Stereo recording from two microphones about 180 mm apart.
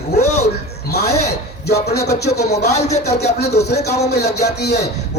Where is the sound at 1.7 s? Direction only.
65° left (ahead or behind).